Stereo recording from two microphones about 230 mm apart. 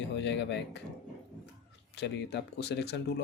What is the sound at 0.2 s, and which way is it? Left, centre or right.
Speech, left.